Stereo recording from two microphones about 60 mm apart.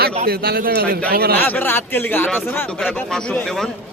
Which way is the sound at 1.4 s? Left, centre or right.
Left.